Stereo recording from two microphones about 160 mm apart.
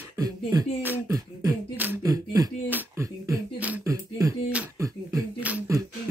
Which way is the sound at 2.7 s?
20° right (ahead or behind).